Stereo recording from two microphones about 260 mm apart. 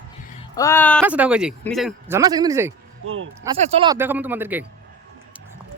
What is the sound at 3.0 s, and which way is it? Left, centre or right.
Speech, right.